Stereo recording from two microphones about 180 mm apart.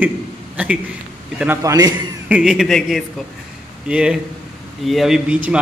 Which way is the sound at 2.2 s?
5° right (ahead or behind).